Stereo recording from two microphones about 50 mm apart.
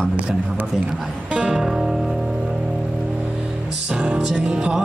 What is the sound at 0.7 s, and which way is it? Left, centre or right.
Music, centre.